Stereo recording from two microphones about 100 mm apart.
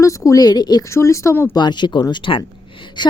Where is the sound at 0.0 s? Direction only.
30° left (ahead or behind).